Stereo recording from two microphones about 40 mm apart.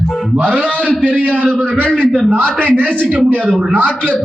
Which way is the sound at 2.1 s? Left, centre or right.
Centre.